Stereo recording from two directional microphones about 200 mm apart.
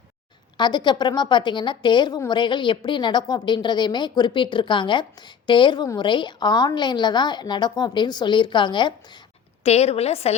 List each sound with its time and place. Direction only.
0.5 s a woman's voice: 20° left (ahead or behind)